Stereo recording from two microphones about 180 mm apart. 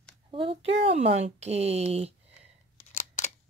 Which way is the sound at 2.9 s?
45° left (ahead or behind).